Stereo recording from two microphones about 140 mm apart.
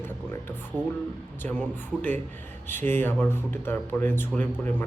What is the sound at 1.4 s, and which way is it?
Speech, 15° left (ahead or behind).